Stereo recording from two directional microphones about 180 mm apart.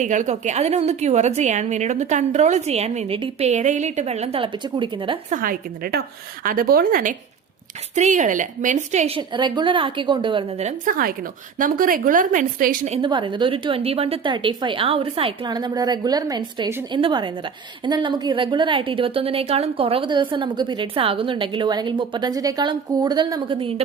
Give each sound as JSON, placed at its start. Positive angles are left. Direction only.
{"t": 0.0, "sound": "a woman's voice", "side_deg": -45}
{"t": 5.3, "sound": "a woman's voice", "side_deg": -50}
{"t": 13.0, "sound": "a woman's voice", "side_deg": -25}